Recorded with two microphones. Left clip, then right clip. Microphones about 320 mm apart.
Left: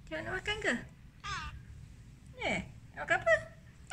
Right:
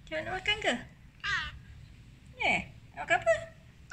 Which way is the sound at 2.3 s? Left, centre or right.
Centre.